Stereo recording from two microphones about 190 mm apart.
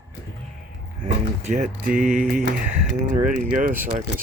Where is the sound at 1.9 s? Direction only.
45° right (ahead or behind).